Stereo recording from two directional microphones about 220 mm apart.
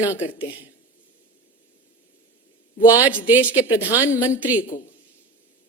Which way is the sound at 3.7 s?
15° left (ahead or behind).